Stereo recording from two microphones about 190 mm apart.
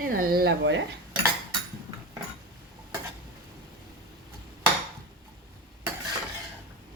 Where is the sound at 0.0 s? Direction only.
50° right (ahead or behind); by 0.8 s 65° right (ahead or behind).